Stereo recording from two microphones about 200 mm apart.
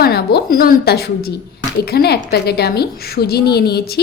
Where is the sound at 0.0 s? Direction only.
50° left (ahead or behind).